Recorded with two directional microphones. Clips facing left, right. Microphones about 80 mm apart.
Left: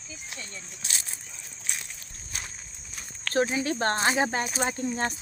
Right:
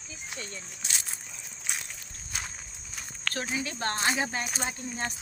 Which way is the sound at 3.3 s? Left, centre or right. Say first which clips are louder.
Left 9 dB; left.